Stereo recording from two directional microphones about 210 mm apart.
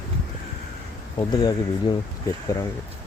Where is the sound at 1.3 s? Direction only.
20° left (ahead or behind).